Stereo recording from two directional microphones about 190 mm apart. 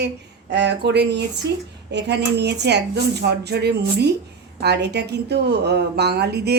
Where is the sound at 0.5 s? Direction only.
65° right (ahead or behind).